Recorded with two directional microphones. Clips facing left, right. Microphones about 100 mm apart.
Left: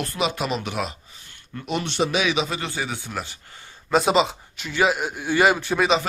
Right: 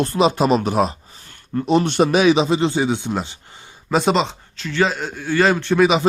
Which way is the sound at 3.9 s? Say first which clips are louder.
Right 1 dB; centre (ahead or behind).